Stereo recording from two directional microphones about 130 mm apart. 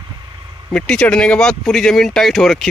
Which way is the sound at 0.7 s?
5° left (ahead or behind).